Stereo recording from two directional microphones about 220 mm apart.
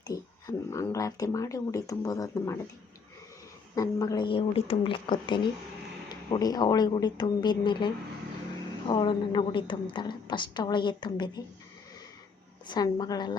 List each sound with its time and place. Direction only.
0.1 s speech: 15° left (ahead or behind)
3.8 s a woman's voice: 15° left (ahead or behind)
8.9 s a woman's voice: 20° left (ahead or behind)
12.6 s a woman's voice: 20° left (ahead or behind)